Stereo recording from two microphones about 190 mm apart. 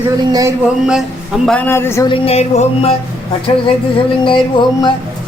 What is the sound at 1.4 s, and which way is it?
Speech, 10° left (ahead or behind).